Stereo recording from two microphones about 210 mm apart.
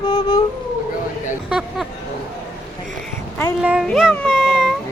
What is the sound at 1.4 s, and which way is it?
Speech, 5° right (ahead or behind).